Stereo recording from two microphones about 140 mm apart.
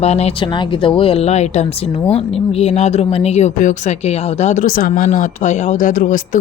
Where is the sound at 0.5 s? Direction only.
40° left (ahead or behind); by 6.2 s 70° left (ahead or behind).